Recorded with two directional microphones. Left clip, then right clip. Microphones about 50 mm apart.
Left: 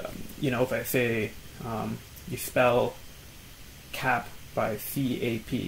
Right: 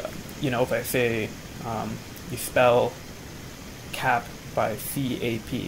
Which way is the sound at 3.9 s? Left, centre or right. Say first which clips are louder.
Right 3 dB; right.